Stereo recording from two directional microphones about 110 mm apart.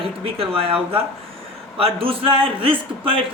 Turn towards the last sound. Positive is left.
turn(degrees=-55)  # may be behind; listen again after turning